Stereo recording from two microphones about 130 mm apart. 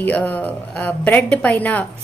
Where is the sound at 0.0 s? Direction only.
10° left (ahead or behind).